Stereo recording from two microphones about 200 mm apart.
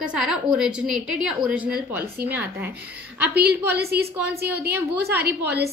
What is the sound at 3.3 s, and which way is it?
A woman's voice, 50° right (ahead or behind).